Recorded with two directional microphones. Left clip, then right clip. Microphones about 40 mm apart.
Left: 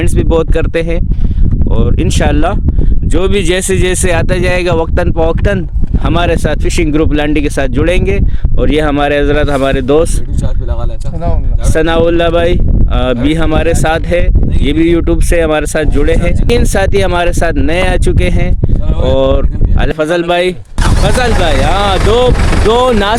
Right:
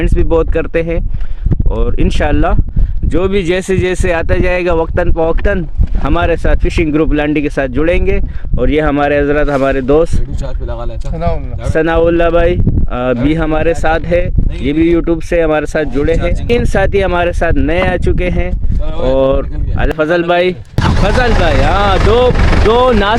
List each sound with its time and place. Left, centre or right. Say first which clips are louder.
0.2 s speech: left 1 dB; left
1.8 s speech: left 2 dB; left
3.1 s speech: left 1 dB; left
5.0 s speech: left 1 dB; left
9.5 s speech: left 1 dB; left
11.7 s speech: left 1 dB; left
12.9 s speech: left 1 dB; left
13.2 s speech: left 1 dB; left
20.7 s a sound: right 1 dB; left
21.3 s speech: even; left
22.4 s speech: even; left
22.7 s speech: even; left